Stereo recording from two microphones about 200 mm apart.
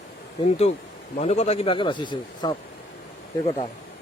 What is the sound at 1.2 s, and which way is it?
Speech, 30° left (ahead or behind).